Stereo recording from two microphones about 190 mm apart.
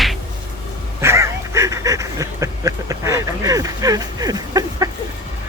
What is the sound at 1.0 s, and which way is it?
Duck, 15° right (ahead or behind).